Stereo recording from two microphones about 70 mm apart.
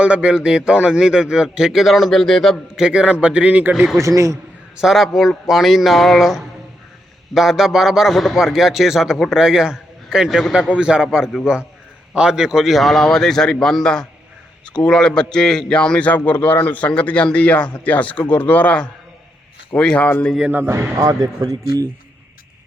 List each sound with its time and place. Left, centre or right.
0.0 s a man's voice: centre
2.7 s a man's voice: centre
4.0 s a man's voice: right
4.8 s a man's voice: centre; by 20.3 s left
20.9 s a man's voice: right